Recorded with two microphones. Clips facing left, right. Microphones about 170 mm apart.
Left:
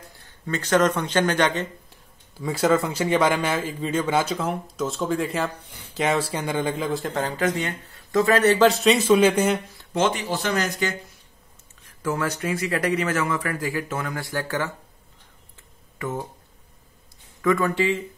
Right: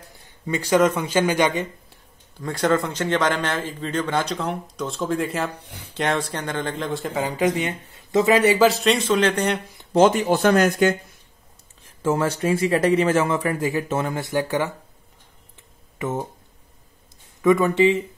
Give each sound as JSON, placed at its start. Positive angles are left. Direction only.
{"t": 0.5, "sound": "a man's voice", "side_deg": -10}
{"t": 1.9, "sound": "speech", "side_deg": 5}
{"t": 9.9, "sound": "speech", "side_deg": -40}
{"t": 11.8, "sound": "speech", "side_deg": -25}
{"t": 16.0, "sound": "speech", "side_deg": -20}
{"t": 17.4, "sound": "speech", "side_deg": -20}